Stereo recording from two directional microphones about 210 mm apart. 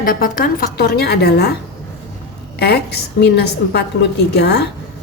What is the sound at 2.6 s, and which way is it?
A woman's voice, 50° left (ahead or behind).